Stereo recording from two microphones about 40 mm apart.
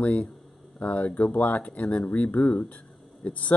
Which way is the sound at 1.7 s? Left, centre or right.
Left.